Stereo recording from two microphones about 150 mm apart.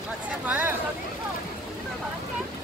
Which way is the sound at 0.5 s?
10° right (ahead or behind).